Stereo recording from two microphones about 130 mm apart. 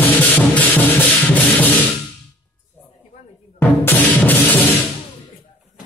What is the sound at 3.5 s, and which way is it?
Music, 15° left (ahead or behind).